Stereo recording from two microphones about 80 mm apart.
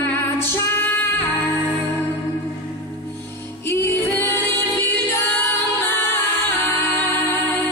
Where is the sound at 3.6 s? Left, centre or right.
Left.